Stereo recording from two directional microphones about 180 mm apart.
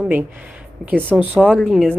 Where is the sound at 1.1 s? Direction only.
10° right (ahead or behind).